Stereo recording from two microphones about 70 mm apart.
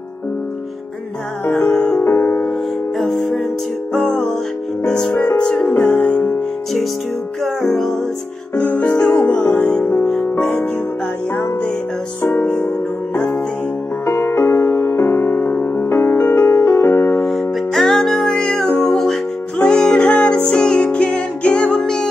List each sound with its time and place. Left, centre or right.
1.6 s music: centre
2.0 s music: left
3.0 s music: centre
5.8 s music: left
7.4 s music: centre
8.5 s music: centre
12.3 s music: left
14.0 s music: left
17.3 s music: centre